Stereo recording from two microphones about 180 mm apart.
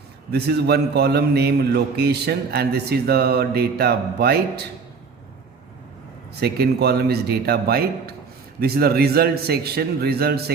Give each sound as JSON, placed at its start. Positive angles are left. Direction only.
{"t": 0.3, "sound": "a man's voice", "side_deg": -65}
{"t": 6.3, "sound": "a man's voice", "side_deg": -65}